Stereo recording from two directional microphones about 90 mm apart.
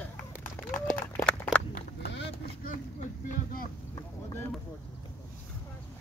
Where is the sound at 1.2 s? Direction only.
10° left (ahead or behind).